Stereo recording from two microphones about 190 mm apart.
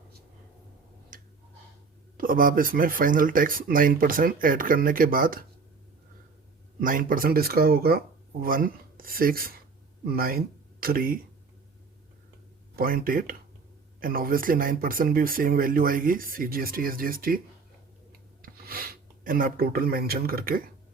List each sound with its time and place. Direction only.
1.1 s tick-tock: 45° right (ahead or behind)
2.1 s speech: 45° right (ahead or behind)
6.7 s speech: 45° right (ahead or behind)
12.7 s speech: 50° right (ahead or behind)
18.4 s speech: 50° right (ahead or behind)